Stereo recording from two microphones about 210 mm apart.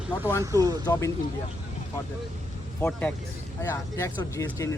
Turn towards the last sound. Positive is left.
turn(degrees=15)  # may be behind; listen again after turning